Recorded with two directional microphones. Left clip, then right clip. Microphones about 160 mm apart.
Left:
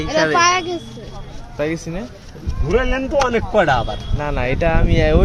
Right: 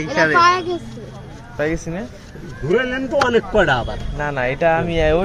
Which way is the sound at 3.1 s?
45° left (ahead or behind).